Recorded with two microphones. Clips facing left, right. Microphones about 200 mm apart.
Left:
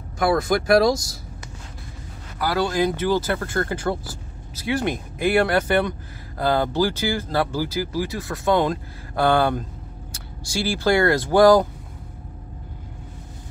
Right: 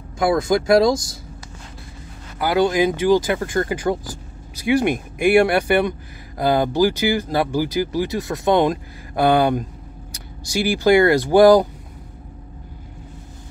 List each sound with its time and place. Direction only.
0.3 s speech: 25° right (ahead or behind)
2.3 s speech: 20° right (ahead or behind)